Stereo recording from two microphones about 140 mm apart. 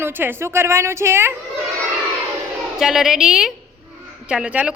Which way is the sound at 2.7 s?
5° right (ahead or behind).